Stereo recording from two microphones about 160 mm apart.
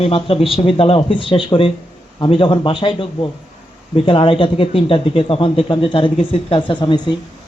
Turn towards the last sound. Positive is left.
turn(degrees=30)  # may be behind; listen again after turning